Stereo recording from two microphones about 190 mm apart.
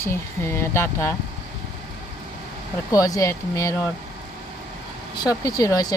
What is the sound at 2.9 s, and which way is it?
Speech, 15° left (ahead or behind).